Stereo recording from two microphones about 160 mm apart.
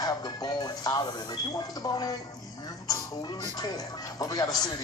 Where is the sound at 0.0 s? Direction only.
25° left (ahead or behind).